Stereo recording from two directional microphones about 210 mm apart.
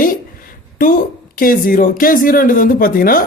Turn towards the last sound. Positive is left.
turn(degrees=45)  # may be behind; listen again after turning